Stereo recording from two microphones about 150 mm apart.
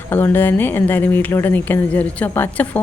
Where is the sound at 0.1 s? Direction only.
15° left (ahead or behind).